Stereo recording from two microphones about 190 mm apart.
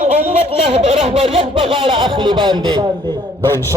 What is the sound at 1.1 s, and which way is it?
A man's voice, 30° right (ahead or behind).